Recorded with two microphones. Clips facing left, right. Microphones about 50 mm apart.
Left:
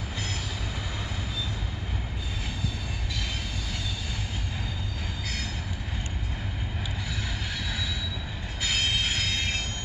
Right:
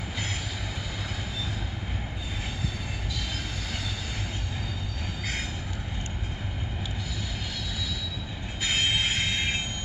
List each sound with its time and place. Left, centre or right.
8.6 s train: centre